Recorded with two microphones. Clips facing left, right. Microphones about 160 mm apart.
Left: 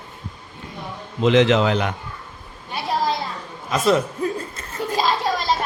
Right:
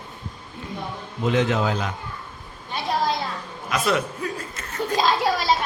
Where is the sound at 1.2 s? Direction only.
90° left; by 1.9 s 70° left (ahead or behind).